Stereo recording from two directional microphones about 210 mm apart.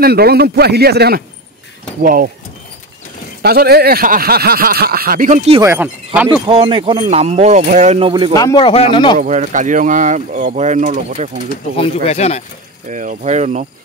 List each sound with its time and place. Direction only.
0.0 s speech: 45° right (ahead or behind)
3.4 s speech: 50° right (ahead or behind)
5.6 s speech: 10° right (ahead or behind)
6.4 s speech: 25° right (ahead or behind)
8.3 s speech: 20° left (ahead or behind)
9.2 s speech: 35° right (ahead or behind)
11.7 s speech: 30° left (ahead or behind)
12.8 s speech: 35° right (ahead or behind)